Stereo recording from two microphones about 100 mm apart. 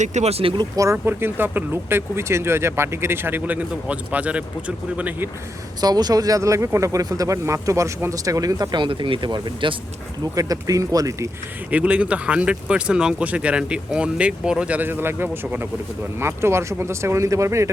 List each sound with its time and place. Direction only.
0.3 s speech: 90° right
0.8 s speech: 25° right (ahead or behind)
5.8 s speech: 40° right (ahead or behind)
10.3 s speech: 35° right (ahead or behind)
11.7 s speech: 10° right (ahead or behind); by 17.7 s 30° right (ahead or behind)